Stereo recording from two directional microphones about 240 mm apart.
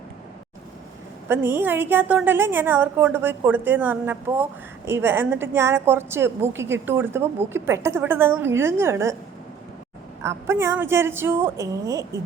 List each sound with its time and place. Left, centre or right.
1.3 s a woman's voice: centre
10.2 s a woman's voice: centre